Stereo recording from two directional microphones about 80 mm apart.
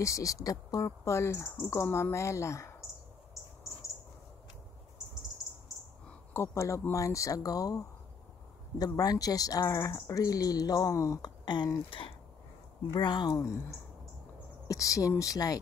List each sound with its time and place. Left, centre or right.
0.0 s speech: left
6.3 s speech: left
11.2 s speech: left
12.9 s speech: left
13.4 s speech: left